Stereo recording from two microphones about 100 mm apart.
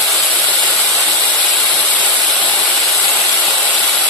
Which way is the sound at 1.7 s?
15° left (ahead or behind).